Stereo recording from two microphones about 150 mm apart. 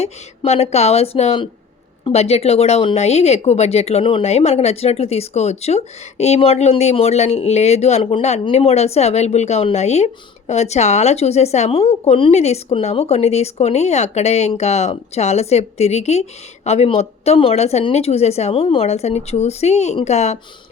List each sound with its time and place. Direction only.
0.0 s speech: 45° left (ahead or behind)